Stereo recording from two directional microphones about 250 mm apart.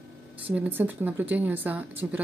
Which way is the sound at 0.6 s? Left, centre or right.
Centre.